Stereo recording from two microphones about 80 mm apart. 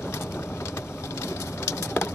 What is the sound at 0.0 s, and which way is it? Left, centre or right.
Bird, left.